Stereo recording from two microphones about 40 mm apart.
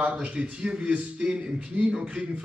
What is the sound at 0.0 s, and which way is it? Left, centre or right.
Speech, right.